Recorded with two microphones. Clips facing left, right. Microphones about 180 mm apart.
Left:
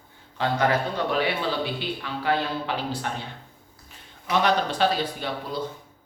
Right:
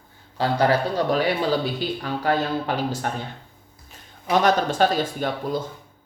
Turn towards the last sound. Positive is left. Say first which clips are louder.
# right 5 dB
turn(degrees=-45)  # may be behind; listen again after turning